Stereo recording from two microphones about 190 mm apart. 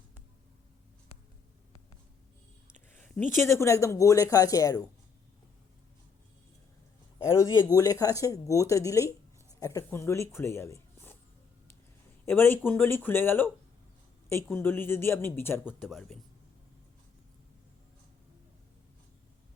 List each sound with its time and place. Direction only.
2.9 s speech: 10° left (ahead or behind)
7.3 s speech: 20° left (ahead or behind)
12.2 s speech: 10° left (ahead or behind)
14.5 s speech: 10° left (ahead or behind)
15.8 s speech: centre (ahead or behind)